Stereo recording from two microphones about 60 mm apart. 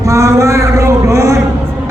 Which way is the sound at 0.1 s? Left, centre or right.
Right.